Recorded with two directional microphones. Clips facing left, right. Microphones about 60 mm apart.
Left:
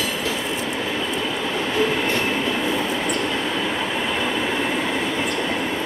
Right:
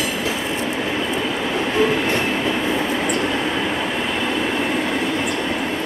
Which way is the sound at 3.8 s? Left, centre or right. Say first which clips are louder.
Right 1 dB; centre.